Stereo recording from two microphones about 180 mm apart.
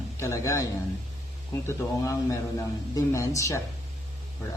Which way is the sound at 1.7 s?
15° left (ahead or behind).